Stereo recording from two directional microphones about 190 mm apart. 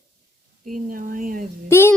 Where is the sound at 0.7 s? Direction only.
45° right (ahead or behind).